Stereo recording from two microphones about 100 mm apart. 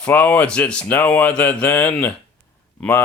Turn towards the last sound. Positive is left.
turn(degrees=20)  # may be behind; listen again after turning